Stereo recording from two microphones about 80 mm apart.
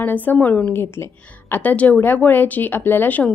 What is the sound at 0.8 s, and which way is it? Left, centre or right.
Speech, left.